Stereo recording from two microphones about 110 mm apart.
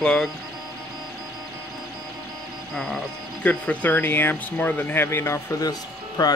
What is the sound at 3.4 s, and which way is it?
Speech, 10° left (ahead or behind).